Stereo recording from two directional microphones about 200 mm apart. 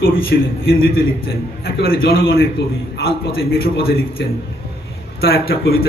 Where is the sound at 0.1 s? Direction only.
50° left (ahead or behind).